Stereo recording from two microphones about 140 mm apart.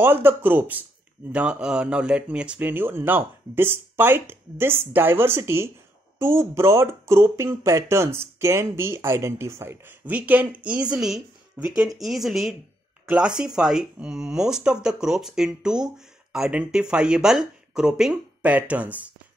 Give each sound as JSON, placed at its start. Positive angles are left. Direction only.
{"t": 0.0, "sound": "speech", "side_deg": -15}
{"t": 13.6, "sound": "speech", "side_deg": -5}